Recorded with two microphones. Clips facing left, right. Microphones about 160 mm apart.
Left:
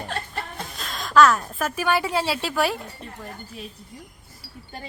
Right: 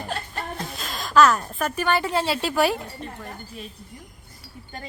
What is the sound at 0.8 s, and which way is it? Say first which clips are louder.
A woman's voice: left 1 dB; centre (ahead or behind).